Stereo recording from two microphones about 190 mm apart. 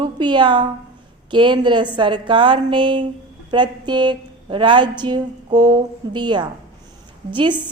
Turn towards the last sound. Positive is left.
turn(degrees=-25)  # may be behind; listen again after turning